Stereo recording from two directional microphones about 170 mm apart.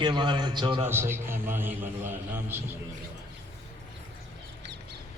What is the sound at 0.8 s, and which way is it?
A man's voice, 15° right (ahead or behind).